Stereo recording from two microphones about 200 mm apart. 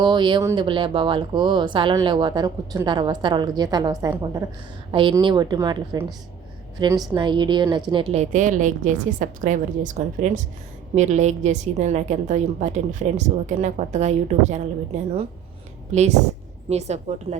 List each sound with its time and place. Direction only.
0.0 s a woman's voice: 20° right (ahead or behind)
15.9 s a woman's voice: 35° right (ahead or behind)